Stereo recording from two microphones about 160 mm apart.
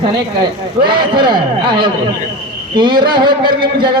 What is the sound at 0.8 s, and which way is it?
A man's voice, 30° right (ahead or behind).